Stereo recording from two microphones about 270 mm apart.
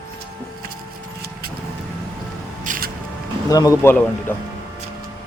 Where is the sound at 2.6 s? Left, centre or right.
Right.